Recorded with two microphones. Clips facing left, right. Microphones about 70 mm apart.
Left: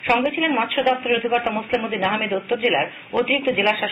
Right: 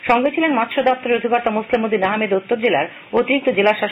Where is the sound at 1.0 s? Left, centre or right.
Right.